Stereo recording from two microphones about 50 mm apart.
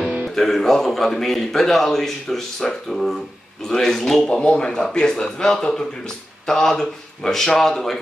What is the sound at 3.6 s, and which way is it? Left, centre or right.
Speech, centre.